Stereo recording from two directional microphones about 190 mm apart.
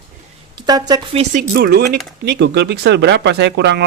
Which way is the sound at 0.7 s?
20° right (ahead or behind).